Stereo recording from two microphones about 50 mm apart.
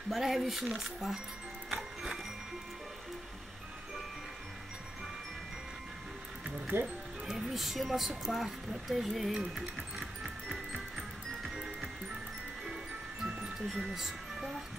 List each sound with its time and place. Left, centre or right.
0.1 s speech: centre
6.7 s speech: right
7.2 s a sound: centre
11.5 s music: centre
13.3 s music: right
13.8 s speech: centre